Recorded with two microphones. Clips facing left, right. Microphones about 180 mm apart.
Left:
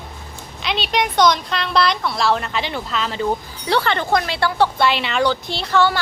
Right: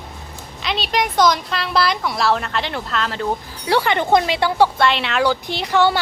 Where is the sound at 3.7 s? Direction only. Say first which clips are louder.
Right 2 dB; 10° right (ahead or behind).